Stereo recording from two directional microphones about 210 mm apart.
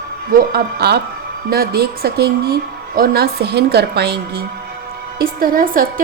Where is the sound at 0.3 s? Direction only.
50° right (ahead or behind).